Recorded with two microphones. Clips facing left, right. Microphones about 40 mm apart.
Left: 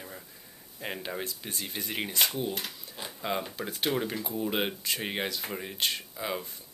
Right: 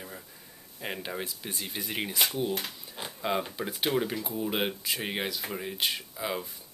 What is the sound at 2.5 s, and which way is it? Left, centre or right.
Speech, right.